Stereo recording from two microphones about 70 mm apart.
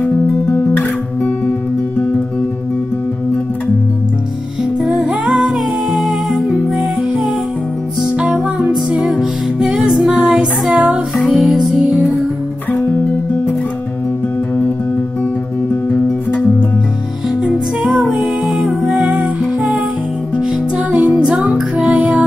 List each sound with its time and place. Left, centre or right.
4.8 s music: centre
15.9 s music: centre
17.4 s music: centre
20.3 s music: centre